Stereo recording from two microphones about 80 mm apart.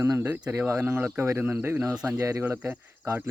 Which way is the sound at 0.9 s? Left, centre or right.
Right.